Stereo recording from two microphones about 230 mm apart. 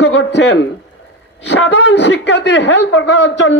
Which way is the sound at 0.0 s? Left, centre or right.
Left.